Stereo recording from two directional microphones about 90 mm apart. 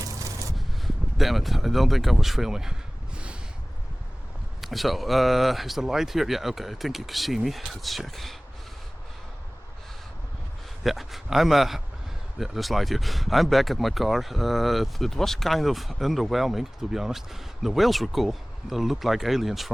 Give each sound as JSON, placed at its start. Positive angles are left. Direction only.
{"t": 0.0, "sound": "a sound", "side_deg": -40}
{"t": 0.5, "sound": "speech", "side_deg": 0}
{"t": 4.6, "sound": "speech", "side_deg": 0}
{"t": 10.8, "sound": "speech", "side_deg": 0}